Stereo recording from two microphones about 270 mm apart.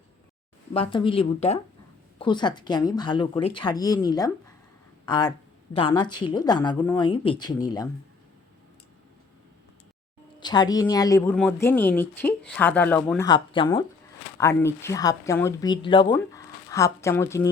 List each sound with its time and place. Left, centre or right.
0.7 s speech: centre
10.4 s speech: centre